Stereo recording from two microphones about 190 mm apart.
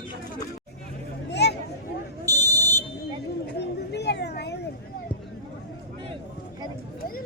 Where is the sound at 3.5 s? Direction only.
60° left (ahead or behind).